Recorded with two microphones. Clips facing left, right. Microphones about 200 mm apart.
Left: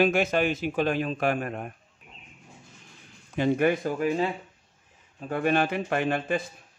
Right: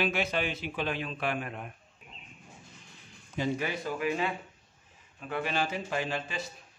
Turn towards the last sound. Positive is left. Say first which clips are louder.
# left 7 dB
turn(degrees=55)  # may be behind; listen again after turning